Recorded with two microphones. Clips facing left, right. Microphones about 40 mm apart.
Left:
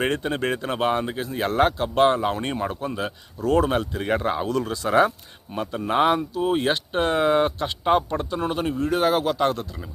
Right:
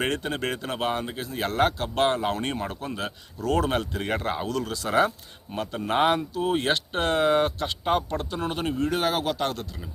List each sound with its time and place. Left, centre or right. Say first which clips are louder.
0.0 s speech: left 3 dB; centre
3.7 s speech: left 3 dB; centre
4.4 s speech: left 4 dB; left
4.9 s speech: left 3 dB; centre